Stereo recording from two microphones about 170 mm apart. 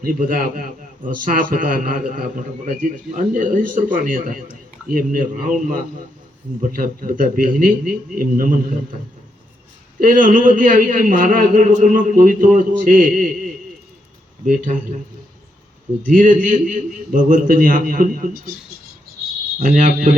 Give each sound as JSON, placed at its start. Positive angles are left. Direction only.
{"t": 0.0, "sound": "a man's voice", "side_deg": -55}
{"t": 10.0, "sound": "a man's voice", "side_deg": -50}
{"t": 14.4, "sound": "a man's voice", "side_deg": -50}
{"t": 16.0, "sound": "a man's voice", "side_deg": -50}
{"t": 19.6, "sound": "a man's voice", "side_deg": -50}